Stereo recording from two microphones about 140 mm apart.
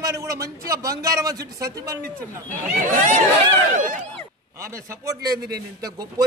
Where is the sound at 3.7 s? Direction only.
70° right (ahead or behind).